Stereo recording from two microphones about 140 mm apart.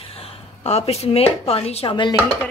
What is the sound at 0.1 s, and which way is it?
Speech, 45° left (ahead or behind).